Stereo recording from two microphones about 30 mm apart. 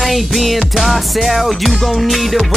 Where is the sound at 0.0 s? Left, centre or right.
Centre.